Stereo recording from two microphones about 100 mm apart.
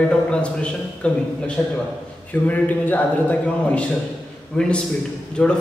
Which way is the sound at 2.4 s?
15° left (ahead or behind).